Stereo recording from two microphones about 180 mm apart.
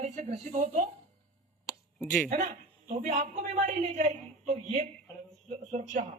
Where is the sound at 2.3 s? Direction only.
40° right (ahead or behind).